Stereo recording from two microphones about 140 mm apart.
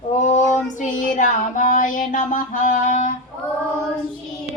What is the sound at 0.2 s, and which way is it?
Child singing, 60° left (ahead or behind).